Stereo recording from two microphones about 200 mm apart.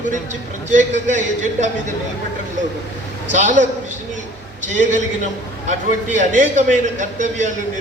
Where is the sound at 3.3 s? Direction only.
40° right (ahead or behind).